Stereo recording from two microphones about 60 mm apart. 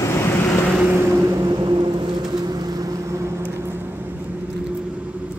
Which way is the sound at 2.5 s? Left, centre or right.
Right.